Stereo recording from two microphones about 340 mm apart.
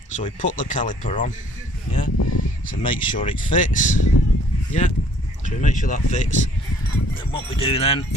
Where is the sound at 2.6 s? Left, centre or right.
Centre.